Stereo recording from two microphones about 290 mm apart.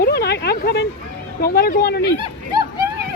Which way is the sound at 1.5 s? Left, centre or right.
Left.